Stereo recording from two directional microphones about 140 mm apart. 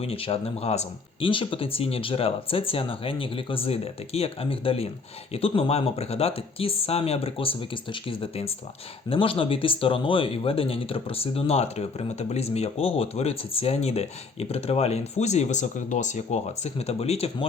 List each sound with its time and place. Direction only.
0.0 s speech: 45° left (ahead or behind)